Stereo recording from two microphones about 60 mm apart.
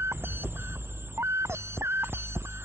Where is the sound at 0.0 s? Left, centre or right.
Right.